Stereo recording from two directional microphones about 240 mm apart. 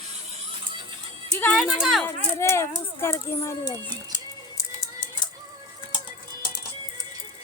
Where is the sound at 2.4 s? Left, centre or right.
Centre.